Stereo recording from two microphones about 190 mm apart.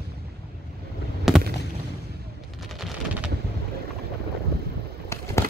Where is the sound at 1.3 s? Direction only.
Centre (ahead or behind).